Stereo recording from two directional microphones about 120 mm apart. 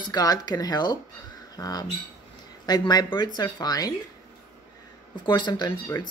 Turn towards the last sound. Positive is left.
turn(degrees=25)  # may be behind; listen again after turning